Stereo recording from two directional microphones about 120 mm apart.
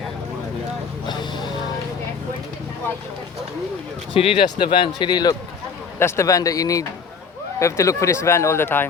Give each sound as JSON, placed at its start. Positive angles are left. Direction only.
{"t": 1.0, "sound": "a sound", "side_deg": 40}
{"t": 4.1, "sound": "a man's voice", "side_deg": 50}
{"t": 6.0, "sound": "speech", "side_deg": 20}